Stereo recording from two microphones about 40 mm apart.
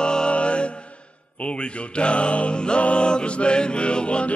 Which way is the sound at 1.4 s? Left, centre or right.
Left.